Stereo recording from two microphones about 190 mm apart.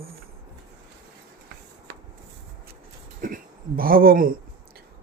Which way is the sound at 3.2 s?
50° right (ahead or behind).